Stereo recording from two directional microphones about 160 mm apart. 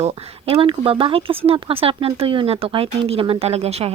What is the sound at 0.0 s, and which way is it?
Speech, 35° right (ahead or behind).